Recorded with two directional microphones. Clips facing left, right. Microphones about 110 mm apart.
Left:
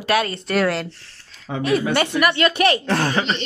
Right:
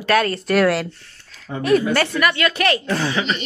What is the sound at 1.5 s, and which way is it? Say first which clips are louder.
Speech: left 2 dB; 90° left.